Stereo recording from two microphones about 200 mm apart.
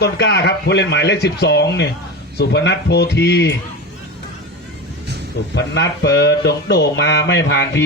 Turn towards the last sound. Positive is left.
turn(degrees=60)  # may be behind; listen again after turning